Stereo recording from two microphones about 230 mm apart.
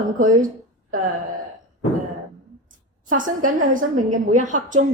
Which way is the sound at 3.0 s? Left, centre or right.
Right.